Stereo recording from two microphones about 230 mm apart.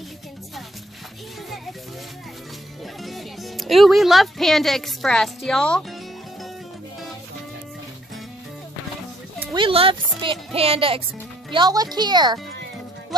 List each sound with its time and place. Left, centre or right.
3.0 s speech: centre
9.4 s speech: centre